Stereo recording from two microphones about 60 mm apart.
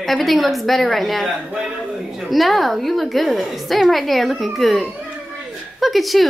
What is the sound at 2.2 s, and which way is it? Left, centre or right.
A woman's voice, centre.